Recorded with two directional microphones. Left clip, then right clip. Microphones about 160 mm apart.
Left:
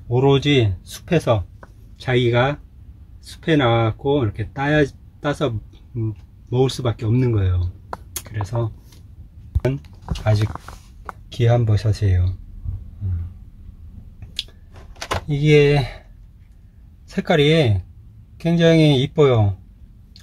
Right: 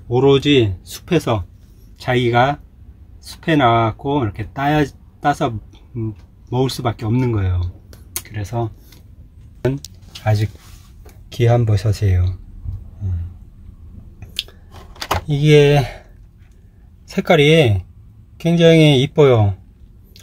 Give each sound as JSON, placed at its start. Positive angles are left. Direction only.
{"t": 0.1, "sound": "speech", "side_deg": -10}
{"t": 6.5, "sound": "speech", "side_deg": -5}
{"t": 8.1, "sound": "a sound", "side_deg": -15}
{"t": 9.6, "sound": "speech", "side_deg": 0}
{"t": 11.2, "sound": "speech", "side_deg": -10}
{"t": 15.0, "sound": "speech", "side_deg": -15}
{"t": 17.1, "sound": "speech", "side_deg": -10}